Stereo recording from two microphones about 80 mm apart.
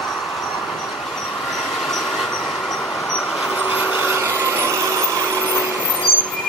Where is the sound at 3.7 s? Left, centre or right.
Right.